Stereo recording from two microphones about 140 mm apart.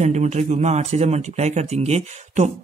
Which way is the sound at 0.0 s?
55° right (ahead or behind).